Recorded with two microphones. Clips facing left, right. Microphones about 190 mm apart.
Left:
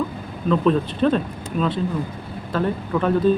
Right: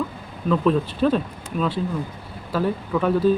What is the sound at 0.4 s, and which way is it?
Speech, 5° right (ahead or behind).